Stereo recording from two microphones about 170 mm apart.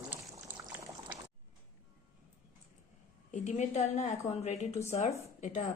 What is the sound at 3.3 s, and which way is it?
A woman's voice, 45° left (ahead or behind).